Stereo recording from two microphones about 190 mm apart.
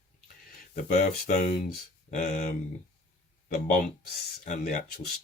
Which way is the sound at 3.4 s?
40° left (ahead or behind).